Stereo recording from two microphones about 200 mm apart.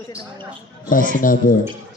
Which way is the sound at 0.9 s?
40° left (ahead or behind).